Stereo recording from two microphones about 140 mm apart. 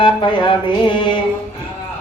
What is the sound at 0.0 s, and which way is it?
Speech, 35° left (ahead or behind).